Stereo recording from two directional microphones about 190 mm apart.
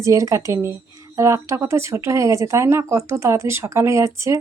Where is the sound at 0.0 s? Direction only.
15° right (ahead or behind).